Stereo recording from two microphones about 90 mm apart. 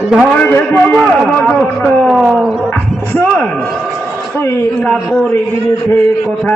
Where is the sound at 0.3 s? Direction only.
20° left (ahead or behind).